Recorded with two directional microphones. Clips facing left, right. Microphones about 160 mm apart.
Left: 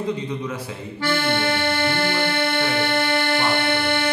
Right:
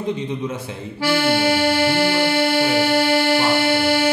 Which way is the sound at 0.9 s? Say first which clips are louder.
Right 4 dB; 10° right (ahead or behind).